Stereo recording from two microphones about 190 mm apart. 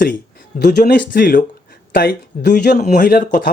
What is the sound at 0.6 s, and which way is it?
Speech, 60° left (ahead or behind).